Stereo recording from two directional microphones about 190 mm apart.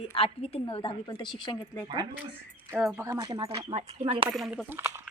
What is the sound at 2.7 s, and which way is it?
Speech, centre (ahead or behind).